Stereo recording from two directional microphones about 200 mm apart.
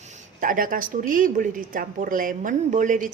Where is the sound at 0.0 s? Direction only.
40° right (ahead or behind).